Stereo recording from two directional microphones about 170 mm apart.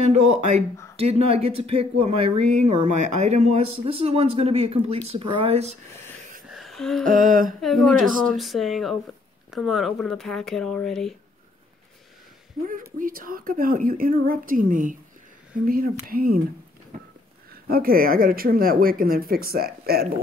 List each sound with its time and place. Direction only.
0.0 s speech: 40° right (ahead or behind)
6.5 s a sound: centre (ahead or behind)
7.1 s humming: 50° right (ahead or behind)
7.6 s speech: centre (ahead or behind)
12.6 s speech: 55° right (ahead or behind)
16.9 s a sound: 55° right (ahead or behind)
17.6 s speech: 60° right (ahead or behind)